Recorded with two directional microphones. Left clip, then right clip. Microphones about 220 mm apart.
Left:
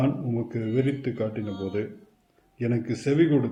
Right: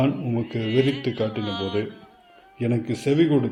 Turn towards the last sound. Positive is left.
turn(degrees=-15)  # may be behind; listen again after turning